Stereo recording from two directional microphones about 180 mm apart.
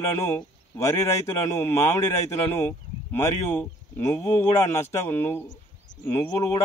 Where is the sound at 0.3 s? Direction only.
15° left (ahead or behind).